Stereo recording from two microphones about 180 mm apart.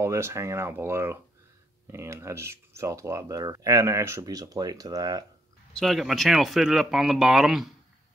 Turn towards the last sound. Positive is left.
turn(degrees=0)  # may be behind; listen again after turning